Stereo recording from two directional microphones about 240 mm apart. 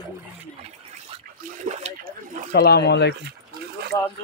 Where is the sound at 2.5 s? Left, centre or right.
Left.